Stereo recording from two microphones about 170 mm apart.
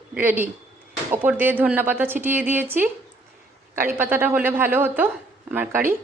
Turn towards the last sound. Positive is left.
turn(degrees=-10)  # may be behind; listen again after turning